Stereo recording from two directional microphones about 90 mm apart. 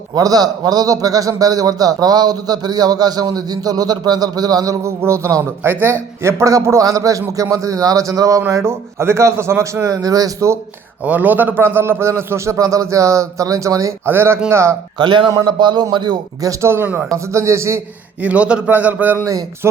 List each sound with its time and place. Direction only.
0.1 s a man's voice: 45° right (ahead or behind)
11.0 s a man's voice: 20° right (ahead or behind); by 14.1 s 35° right (ahead or behind)
14.1 s a man's voice: 25° right (ahead or behind)
14.9 s a man's voice: 60° right (ahead or behind); by 17.1 s 20° right (ahead or behind)
17.3 s a man's voice: 30° right (ahead or behind)
18.2 s speech: 15° right (ahead or behind)
19.1 s a man's voice: 40° right (ahead or behind)